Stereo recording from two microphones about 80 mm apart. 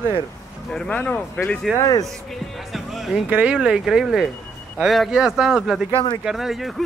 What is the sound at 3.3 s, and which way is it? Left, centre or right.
Speech, centre.